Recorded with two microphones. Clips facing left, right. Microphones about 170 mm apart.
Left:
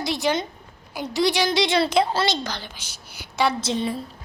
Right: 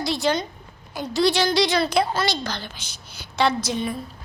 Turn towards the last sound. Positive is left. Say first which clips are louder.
# left 1 dB
turn(degrees=30)  # may be behind; listen again after turning